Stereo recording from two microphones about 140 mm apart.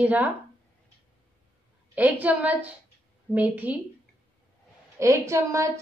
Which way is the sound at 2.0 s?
10° right (ahead or behind).